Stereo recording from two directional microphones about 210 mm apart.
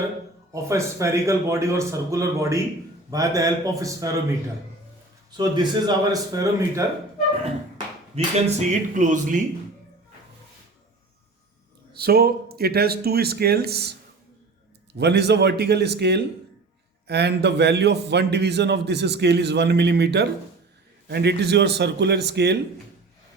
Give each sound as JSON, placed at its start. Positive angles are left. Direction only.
{"t": 0.5, "sound": "a man's voice", "side_deg": -15}
{"t": 5.4, "sound": "speech", "side_deg": -20}
{"t": 8.1, "sound": "speech", "side_deg": -30}
{"t": 11.9, "sound": "a man's voice", "side_deg": -50}
{"t": 14.9, "sound": "a man's voice", "side_deg": -50}